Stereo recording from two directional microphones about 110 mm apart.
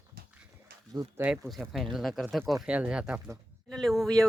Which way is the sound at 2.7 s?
10° right (ahead or behind).